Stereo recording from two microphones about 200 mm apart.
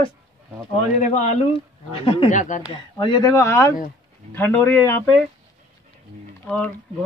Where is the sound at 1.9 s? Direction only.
25° left (ahead or behind).